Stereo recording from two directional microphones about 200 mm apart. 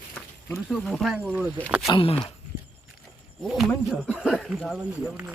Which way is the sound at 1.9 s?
25° left (ahead or behind).